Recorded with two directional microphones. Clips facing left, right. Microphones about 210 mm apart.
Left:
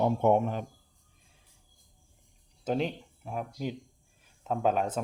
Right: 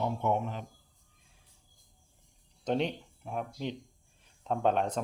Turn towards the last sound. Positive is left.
turn(degrees=5)  # may be behind; listen again after turning